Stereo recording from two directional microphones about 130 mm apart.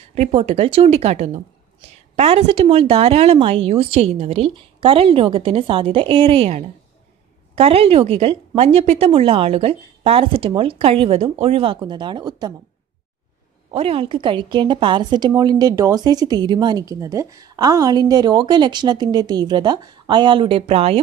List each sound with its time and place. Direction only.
0.1 s a woman's voice: 55° right (ahead or behind)
2.1 s a woman's voice: 45° right (ahead or behind)
13.7 s a woman's voice: 45° right (ahead or behind)